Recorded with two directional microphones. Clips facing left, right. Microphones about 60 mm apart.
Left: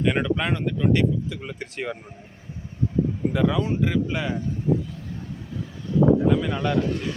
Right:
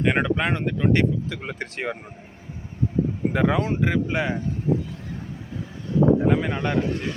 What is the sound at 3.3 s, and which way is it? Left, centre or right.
Speech, right.